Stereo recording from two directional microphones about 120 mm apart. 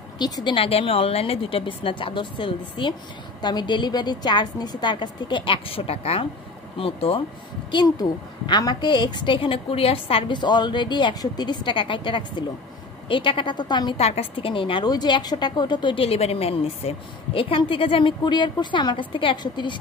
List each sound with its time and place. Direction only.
0.2 s a woman's voice: 40° left (ahead or behind)
7.7 s a woman's voice: 35° left (ahead or behind)
13.9 s a woman's voice: 60° left (ahead or behind); by 19.8 s 40° left (ahead or behind)